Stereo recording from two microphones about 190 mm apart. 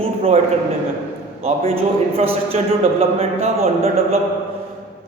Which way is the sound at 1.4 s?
30° right (ahead or behind).